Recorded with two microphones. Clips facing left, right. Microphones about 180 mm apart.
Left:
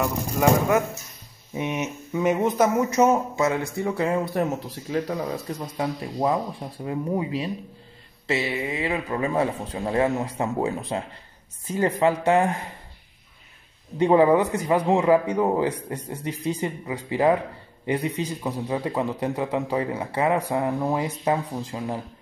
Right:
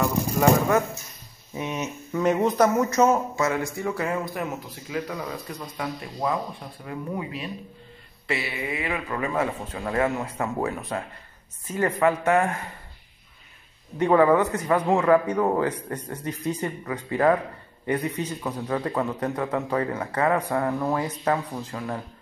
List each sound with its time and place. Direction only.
0.0 s a sound: 15° left (ahead or behind)
1.5 s a man's voice: 20° left (ahead or behind)
13.9 s speech: 25° left (ahead or behind)